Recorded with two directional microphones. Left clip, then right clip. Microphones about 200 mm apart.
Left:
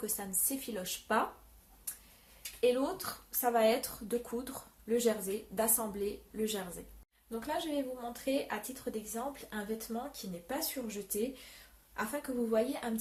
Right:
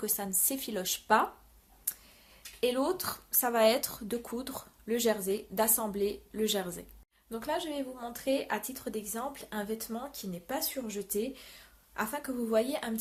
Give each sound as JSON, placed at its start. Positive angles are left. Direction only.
{"t": 0.0, "sound": "speech", "side_deg": -40}
{"t": 2.6, "sound": "speech", "side_deg": -45}
{"t": 7.3, "sound": "speech", "side_deg": -50}